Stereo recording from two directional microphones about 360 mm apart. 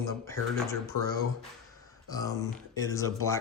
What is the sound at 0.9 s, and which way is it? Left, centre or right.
Speech, right.